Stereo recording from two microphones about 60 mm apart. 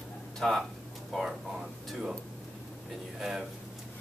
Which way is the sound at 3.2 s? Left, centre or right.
Centre.